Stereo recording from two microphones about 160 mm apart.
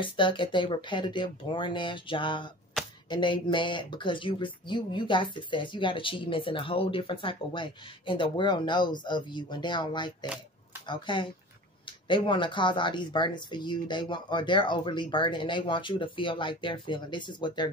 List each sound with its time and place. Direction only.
0.0 s speech: 30° left (ahead or behind)
10.2 s a sound: 5° right (ahead or behind)
10.9 s speech: 30° left (ahead or behind)